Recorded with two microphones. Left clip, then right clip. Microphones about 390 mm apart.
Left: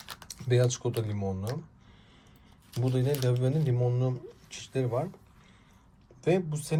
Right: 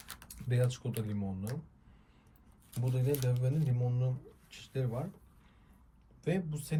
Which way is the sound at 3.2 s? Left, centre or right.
Centre.